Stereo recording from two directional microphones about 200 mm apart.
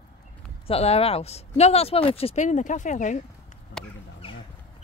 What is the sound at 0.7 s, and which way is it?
Speech, 30° left (ahead or behind).